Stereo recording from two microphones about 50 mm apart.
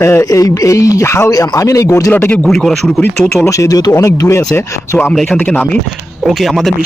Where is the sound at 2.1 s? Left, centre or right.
Left.